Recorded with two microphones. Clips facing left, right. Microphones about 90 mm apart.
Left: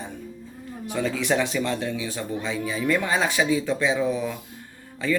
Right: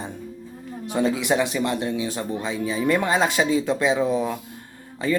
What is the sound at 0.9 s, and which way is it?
Speech, 25° right (ahead or behind).